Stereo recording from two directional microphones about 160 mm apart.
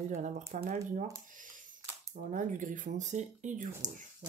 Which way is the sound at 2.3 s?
55° right (ahead or behind).